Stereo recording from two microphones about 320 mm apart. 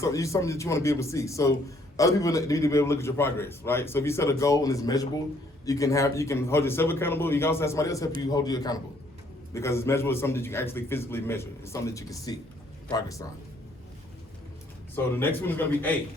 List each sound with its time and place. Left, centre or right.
0.0 s a man's voice: centre
14.9 s a man's voice: centre